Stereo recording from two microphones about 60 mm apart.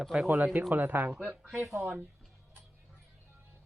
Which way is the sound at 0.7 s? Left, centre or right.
Right.